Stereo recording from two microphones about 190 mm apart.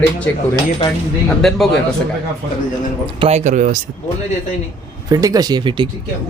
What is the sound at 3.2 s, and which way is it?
Speech, 35° right (ahead or behind).